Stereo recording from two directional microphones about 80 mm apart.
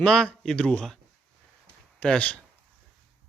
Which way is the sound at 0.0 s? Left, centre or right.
Centre.